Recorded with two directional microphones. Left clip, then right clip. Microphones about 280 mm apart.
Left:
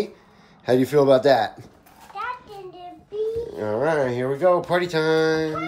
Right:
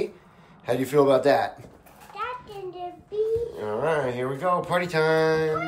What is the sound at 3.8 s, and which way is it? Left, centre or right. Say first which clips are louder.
Speech: left 3 dB; centre.